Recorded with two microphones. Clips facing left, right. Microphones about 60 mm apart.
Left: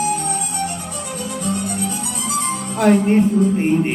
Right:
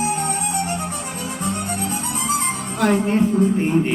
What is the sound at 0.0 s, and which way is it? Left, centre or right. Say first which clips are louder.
Music: left 1 dB; right.